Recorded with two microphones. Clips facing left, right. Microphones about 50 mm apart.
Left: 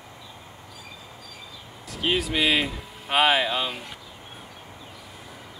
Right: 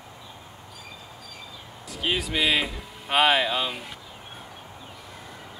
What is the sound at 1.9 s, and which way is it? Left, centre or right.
Speech, centre.